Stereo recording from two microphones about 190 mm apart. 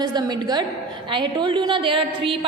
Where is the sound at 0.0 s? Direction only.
20° right (ahead or behind).